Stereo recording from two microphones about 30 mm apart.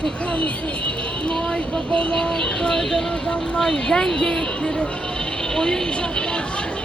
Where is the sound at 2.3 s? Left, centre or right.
Left.